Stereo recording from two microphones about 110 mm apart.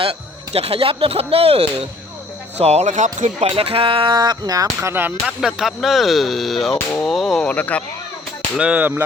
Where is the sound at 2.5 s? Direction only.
75° right (ahead or behind); by 4.7 s 35° right (ahead or behind).